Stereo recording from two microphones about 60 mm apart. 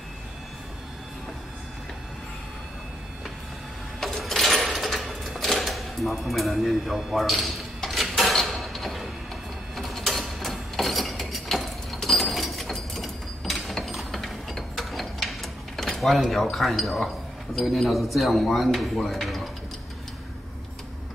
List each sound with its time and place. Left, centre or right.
4.0 s sewing machine: centre
8.1 s a sound: centre
9.8 s mechanisms: centre
16.5 s speech: centre